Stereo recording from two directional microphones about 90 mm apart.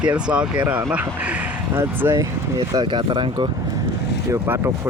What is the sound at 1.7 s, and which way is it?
Speech, 25° right (ahead or behind).